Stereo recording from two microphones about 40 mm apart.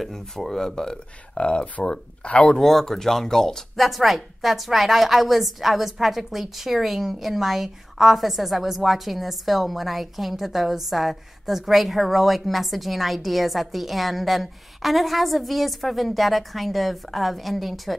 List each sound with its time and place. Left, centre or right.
0.0 s speech: centre
1.3 s speech: left
2.6 s speech: centre